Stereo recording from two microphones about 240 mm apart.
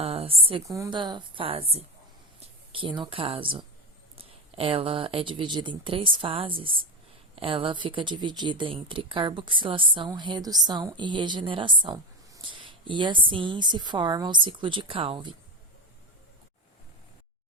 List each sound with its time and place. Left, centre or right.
0.0 s speech: right